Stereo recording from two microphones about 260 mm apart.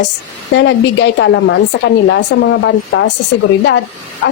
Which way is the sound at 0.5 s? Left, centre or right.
Left.